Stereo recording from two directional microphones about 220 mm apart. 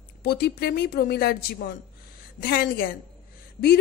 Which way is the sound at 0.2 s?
45° left (ahead or behind).